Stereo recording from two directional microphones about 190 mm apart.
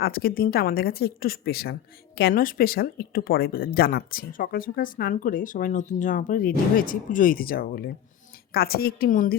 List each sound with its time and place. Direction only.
0.0 s speech: 55° left (ahead or behind)